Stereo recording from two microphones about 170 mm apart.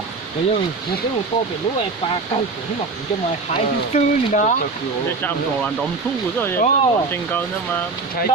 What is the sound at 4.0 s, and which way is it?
Speech, 45° left (ahead or behind).